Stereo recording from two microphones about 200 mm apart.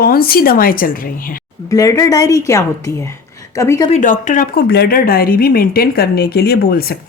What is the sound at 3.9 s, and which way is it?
Speech, 40° left (ahead or behind).